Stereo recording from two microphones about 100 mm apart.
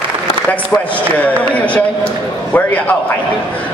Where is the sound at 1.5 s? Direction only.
15° left (ahead or behind).